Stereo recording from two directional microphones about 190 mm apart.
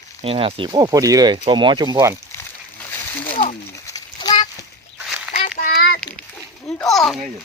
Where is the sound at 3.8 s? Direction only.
20° left (ahead or behind).